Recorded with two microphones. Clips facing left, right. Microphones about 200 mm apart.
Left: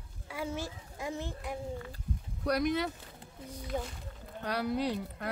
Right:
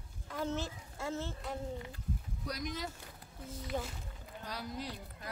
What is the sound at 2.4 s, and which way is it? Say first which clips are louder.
Speech: left 11 dB; 65° left (ahead or behind).